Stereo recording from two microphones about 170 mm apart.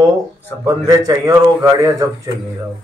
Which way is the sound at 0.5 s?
10° left (ahead or behind).